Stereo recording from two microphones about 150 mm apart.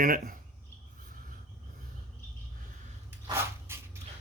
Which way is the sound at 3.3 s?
15° right (ahead or behind).